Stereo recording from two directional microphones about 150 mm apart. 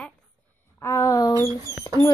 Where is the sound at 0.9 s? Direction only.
20° left (ahead or behind).